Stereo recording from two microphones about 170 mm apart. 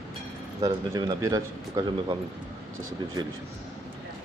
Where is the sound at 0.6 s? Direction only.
20° right (ahead or behind).